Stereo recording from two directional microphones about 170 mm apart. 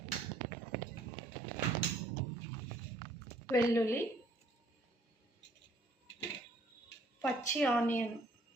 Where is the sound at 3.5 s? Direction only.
15° left (ahead or behind).